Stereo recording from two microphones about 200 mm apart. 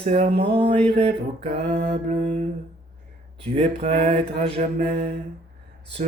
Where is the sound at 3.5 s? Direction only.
30° right (ahead or behind).